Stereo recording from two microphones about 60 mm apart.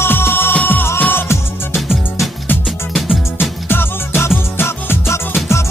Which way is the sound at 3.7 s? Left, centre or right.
Left.